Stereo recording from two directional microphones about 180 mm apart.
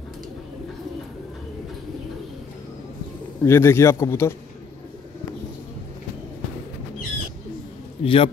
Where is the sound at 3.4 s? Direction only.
15° left (ahead or behind).